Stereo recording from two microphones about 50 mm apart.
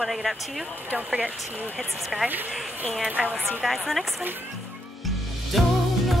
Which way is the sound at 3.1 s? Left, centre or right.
Right.